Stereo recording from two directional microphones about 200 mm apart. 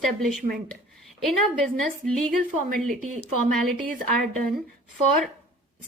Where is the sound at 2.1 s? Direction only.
5° left (ahead or behind).